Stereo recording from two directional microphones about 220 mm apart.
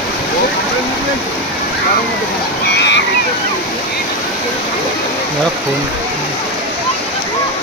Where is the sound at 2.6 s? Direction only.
50° left (ahead or behind).